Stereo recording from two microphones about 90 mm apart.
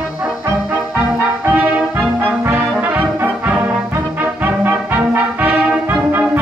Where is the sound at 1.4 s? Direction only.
15° right (ahead or behind).